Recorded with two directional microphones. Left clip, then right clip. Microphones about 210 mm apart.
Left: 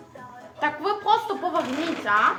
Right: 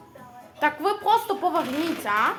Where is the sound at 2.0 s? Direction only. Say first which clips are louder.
Left 3 dB; 25° right (ahead or behind).